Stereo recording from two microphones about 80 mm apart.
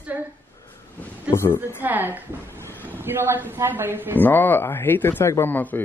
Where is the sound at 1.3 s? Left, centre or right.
Left.